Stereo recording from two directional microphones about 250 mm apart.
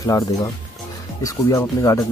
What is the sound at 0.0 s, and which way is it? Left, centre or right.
Speech, centre.